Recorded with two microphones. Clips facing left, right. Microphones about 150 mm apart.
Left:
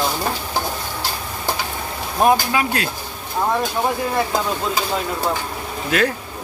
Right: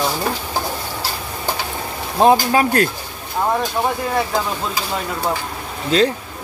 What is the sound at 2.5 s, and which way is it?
Speech, 45° right (ahead or behind).